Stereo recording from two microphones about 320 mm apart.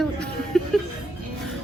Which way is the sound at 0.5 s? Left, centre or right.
Centre.